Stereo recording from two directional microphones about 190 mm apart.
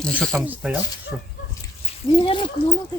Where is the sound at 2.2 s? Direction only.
25° left (ahead or behind).